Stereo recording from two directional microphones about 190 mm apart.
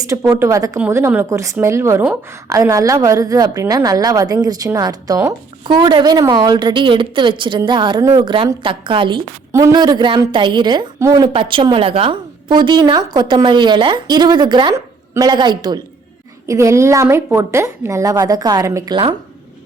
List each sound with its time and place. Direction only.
0.0 s a woman's voice: 15° right (ahead or behind)